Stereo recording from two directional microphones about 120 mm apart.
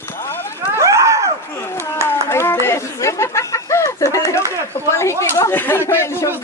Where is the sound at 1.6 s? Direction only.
20° left (ahead or behind).